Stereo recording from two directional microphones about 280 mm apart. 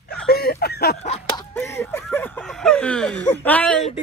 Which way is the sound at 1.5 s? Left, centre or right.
Centre.